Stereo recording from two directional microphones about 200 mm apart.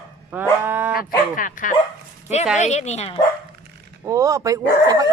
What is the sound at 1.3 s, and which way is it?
Speech, 40° left (ahead or behind).